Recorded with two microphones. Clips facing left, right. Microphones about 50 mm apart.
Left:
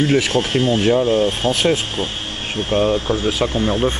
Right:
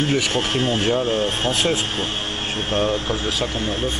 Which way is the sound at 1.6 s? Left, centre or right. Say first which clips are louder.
Left 3 dB; centre.